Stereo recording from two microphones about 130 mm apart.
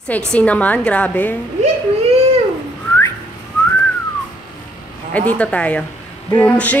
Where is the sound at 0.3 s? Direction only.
10° left (ahead or behind).